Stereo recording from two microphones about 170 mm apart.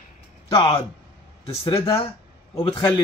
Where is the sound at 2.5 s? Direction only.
30° left (ahead or behind).